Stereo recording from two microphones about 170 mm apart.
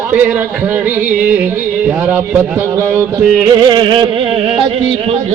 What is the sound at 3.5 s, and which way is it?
Music, 25° right (ahead or behind).